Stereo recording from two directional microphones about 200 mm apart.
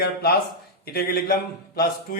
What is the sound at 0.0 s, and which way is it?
A man's voice, 50° left (ahead or behind).